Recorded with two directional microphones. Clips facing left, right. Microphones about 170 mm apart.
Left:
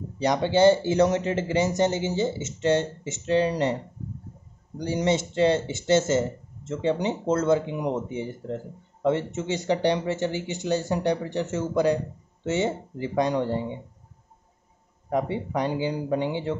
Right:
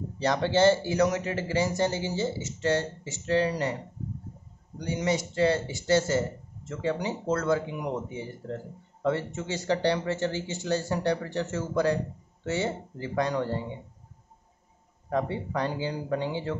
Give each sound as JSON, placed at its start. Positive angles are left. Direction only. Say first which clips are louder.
{"t": 0.2, "sound": "speech", "louder": "left 3 dB", "side_deg": 15}
{"t": 0.9, "sound": "speech", "louder": "left 4 dB", "side_deg": 30}
{"t": 4.8, "sound": "speech", "louder": "left 4 dB", "side_deg": 30}
{"t": 15.0, "sound": "speech", "louder": "left 3 dB", "side_deg": 15}